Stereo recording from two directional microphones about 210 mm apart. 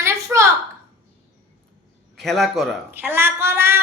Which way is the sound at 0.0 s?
15° right (ahead or behind).